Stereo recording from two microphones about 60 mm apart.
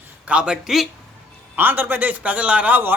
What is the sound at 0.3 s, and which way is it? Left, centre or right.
Speech, centre.